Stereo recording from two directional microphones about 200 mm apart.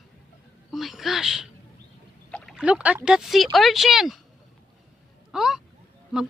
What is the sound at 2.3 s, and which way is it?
Speech, centre (ahead or behind).